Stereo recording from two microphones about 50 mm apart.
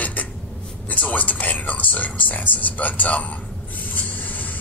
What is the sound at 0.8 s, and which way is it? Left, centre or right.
Speech, left.